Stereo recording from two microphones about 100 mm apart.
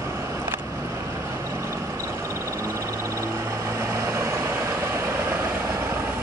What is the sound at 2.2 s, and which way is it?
Frog, 30° right (ahead or behind).